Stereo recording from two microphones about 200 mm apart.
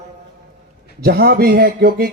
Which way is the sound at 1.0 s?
50° right (ahead or behind).